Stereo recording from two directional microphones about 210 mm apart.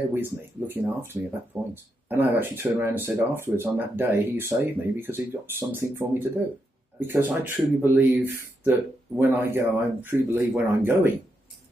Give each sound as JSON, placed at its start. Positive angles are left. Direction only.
{"t": 0.1, "sound": "speech", "side_deg": -10}